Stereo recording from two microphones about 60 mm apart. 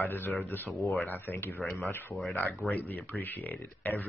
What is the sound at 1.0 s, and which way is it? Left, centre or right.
Speech, left.